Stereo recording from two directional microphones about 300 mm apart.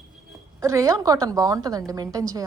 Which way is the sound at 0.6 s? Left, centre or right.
Centre.